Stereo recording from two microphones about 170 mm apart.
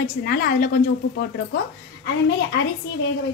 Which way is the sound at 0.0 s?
60° left (ahead or behind).